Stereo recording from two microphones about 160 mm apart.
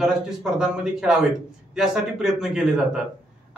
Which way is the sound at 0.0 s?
5° right (ahead or behind).